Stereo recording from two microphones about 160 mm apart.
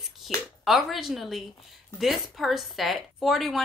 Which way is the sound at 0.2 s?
Centre (ahead or behind).